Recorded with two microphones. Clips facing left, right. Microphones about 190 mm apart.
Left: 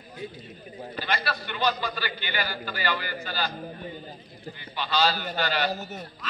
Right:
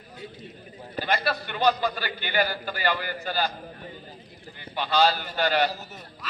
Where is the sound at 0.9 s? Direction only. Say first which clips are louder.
Right 4 dB; 50° right (ahead or behind).